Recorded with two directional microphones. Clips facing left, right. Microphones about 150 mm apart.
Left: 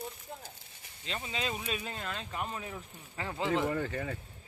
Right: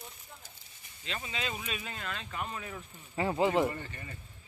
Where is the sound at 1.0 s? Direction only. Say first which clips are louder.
Left 1 dB; 30° left (ahead or behind).